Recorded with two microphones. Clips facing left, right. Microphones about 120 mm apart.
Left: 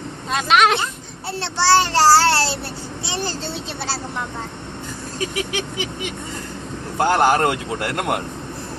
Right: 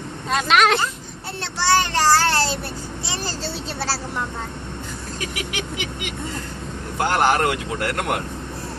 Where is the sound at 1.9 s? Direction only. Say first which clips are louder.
Left 5 dB; 30° left (ahead or behind).